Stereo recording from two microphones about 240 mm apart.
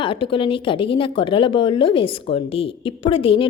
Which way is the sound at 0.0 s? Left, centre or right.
Left.